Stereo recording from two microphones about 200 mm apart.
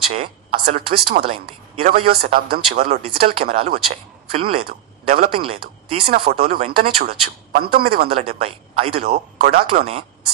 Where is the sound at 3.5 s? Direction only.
30° right (ahead or behind).